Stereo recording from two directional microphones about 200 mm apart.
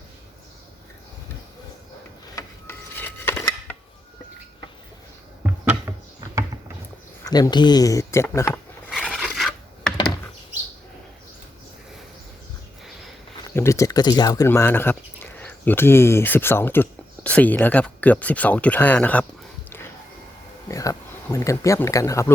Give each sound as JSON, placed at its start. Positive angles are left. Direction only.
{"t": 2.3, "sound": "a sound", "side_deg": 10}
{"t": 5.4, "sound": "a sound", "side_deg": -10}
{"t": 7.3, "sound": "speech", "side_deg": 20}
{"t": 8.9, "sound": "filing", "side_deg": 5}
{"t": 13.5, "sound": "speech", "side_deg": 15}
{"t": 20.7, "sound": "speech", "side_deg": 15}